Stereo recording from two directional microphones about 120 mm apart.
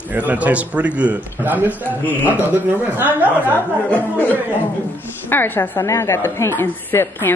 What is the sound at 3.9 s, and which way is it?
A woman's voice, 15° left (ahead or behind).